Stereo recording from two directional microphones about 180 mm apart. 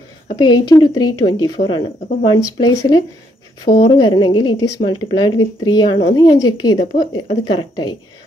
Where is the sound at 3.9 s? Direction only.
25° left (ahead or behind).